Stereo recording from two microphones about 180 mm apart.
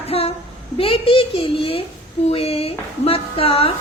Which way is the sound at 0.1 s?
35° left (ahead or behind).